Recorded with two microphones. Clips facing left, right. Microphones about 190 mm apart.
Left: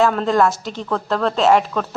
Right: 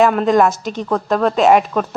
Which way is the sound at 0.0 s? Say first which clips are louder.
Right 3 dB; 15° right (ahead or behind).